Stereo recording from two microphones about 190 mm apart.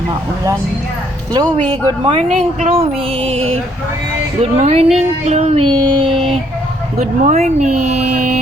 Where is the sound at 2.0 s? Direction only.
35° right (ahead or behind).